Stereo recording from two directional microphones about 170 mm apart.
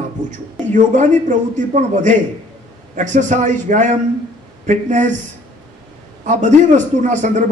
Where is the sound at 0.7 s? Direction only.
45° right (ahead or behind).